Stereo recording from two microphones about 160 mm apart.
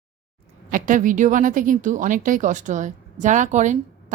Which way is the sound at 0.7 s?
55° right (ahead or behind).